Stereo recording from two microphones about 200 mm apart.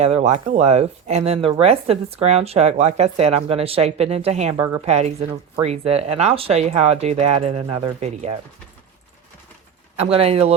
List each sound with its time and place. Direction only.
0.0 s speech: 35° right (ahead or behind)
10.0 s speech: 30° right (ahead or behind)